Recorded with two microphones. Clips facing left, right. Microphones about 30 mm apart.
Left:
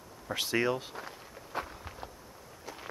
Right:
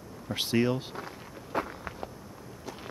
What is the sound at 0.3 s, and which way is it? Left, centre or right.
Speech, left.